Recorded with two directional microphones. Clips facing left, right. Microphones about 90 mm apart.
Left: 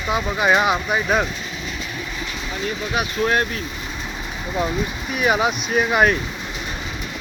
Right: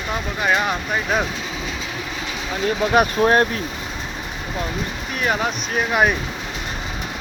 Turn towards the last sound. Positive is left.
turn(degrees=0)  # may be behind; listen again after turning